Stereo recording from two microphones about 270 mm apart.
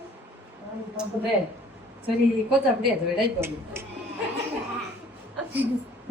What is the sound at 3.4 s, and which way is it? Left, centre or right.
Speech, centre.